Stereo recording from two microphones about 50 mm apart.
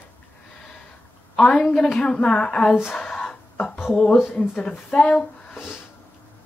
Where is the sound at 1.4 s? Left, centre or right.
Centre.